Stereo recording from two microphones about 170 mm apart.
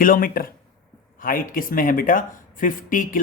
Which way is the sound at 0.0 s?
55° left (ahead or behind).